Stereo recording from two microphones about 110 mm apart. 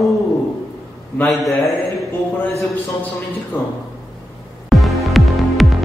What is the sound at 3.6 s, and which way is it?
Speech, 20° left (ahead or behind).